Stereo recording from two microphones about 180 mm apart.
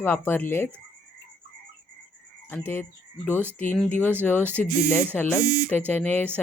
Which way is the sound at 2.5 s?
10° left (ahead or behind).